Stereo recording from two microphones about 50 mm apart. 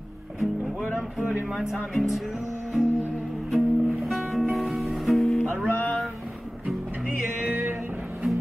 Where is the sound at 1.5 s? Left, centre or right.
Centre.